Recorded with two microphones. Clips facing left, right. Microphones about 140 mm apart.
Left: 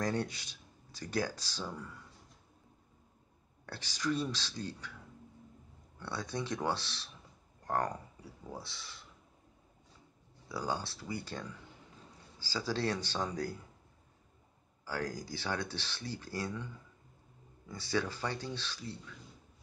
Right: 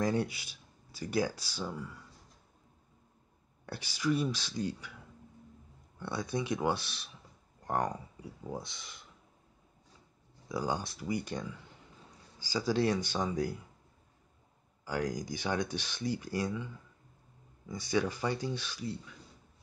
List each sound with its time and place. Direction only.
0.0 s speech: 10° right (ahead or behind)
3.6 s speech: 10° right (ahead or behind)
5.9 s speech: 15° right (ahead or behind)
10.5 s speech: 15° right (ahead or behind)
14.9 s speech: 15° right (ahead or behind)
17.6 s speech: 15° right (ahead or behind)